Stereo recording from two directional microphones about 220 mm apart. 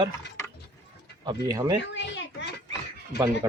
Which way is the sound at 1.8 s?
55° left (ahead or behind).